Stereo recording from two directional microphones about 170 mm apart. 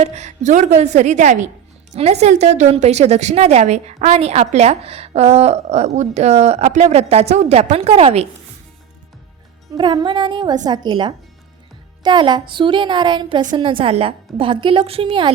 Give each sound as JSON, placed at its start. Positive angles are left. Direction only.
{"t": 0.0, "sound": "a woman's voice", "side_deg": -40}
{"t": 9.7, "sound": "a woman's voice", "side_deg": -25}